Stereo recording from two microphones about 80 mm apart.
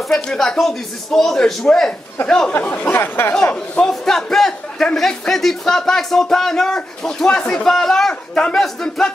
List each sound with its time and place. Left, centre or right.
0.1 s speech: centre
2.5 s speech: centre
3.8 s a man's voice: centre